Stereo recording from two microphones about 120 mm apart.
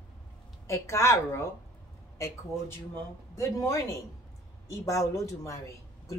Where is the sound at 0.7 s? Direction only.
20° left (ahead or behind).